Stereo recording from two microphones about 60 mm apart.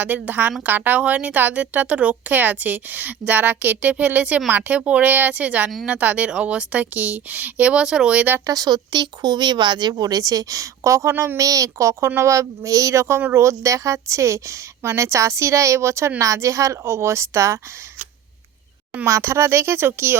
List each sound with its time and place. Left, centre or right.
0.0 s a woman's voice: right
8.4 s speech: right
9.9 s a woman's voice: right
19.0 s speech: right